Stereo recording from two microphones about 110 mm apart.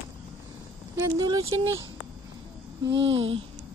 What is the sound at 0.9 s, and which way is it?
Speech, 30° right (ahead or behind).